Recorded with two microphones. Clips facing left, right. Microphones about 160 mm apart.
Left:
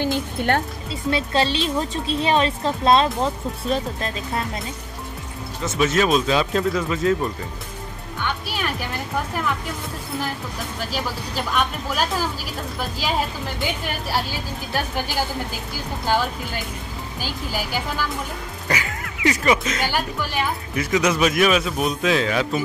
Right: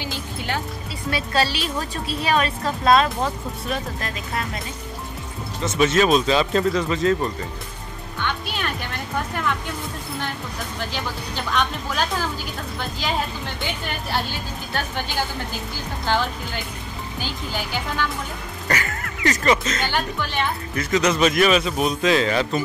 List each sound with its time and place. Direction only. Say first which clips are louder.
0.0 s music: left 8 dB; 55° left (ahead or behind)
1.1 s a woman's voice: left 1 dB; 25° left (ahead or behind)
5.6 s speech: right 1 dB; centre (ahead or behind)
8.2 s music: even; 10° left (ahead or behind)
10.9 s speech: left 2 dB; 5° left (ahead or behind)
14.1 s speech: even; 5° left (ahead or behind)
17.2 s speech: left 1 dB; 5° left (ahead or behind)